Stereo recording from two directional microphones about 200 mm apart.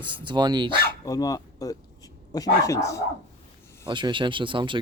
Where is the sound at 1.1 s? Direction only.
20° left (ahead or behind).